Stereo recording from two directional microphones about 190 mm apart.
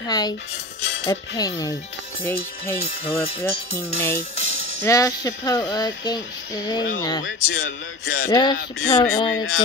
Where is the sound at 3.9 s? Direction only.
10° left (ahead or behind).